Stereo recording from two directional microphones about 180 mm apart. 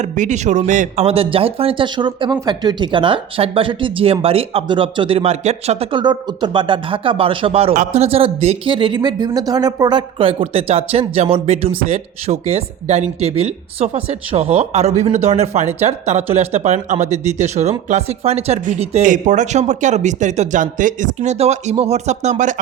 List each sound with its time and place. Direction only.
0.0 s speech: 40° right (ahead or behind)